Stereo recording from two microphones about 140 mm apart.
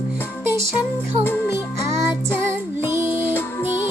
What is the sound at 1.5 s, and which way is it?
Music, 20° right (ahead or behind).